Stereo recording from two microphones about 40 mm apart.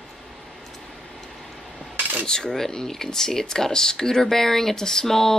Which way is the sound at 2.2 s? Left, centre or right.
Centre.